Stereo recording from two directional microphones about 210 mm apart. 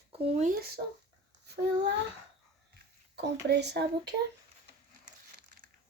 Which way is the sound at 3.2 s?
55° right (ahead or behind).